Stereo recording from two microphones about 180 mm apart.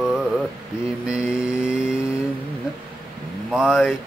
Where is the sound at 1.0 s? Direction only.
5° right (ahead or behind).